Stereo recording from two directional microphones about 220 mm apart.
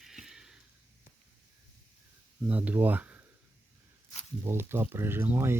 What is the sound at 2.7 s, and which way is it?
Speech, 10° right (ahead or behind).